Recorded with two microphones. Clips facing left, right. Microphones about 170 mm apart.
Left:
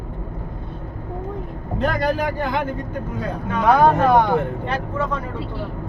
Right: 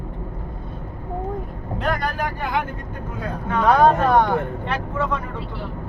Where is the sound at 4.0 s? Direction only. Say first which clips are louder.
Left 2 dB; 10° left (ahead or behind).